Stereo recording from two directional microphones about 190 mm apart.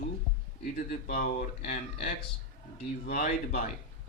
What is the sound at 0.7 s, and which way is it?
Speech, 50° left (ahead or behind).